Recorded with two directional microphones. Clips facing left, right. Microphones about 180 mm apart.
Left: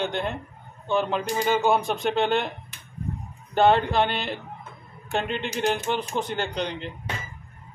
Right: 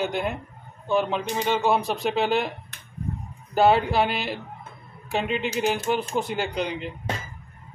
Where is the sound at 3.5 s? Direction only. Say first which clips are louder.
Even; 5° right (ahead or behind).